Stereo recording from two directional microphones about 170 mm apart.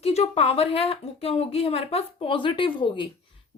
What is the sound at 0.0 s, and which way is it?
A woman's voice, 40° left (ahead or behind).